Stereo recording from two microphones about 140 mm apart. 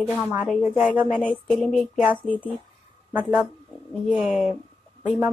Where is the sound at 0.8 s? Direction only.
10° right (ahead or behind).